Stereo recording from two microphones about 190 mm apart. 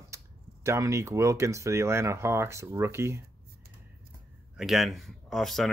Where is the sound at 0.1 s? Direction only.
15° right (ahead or behind).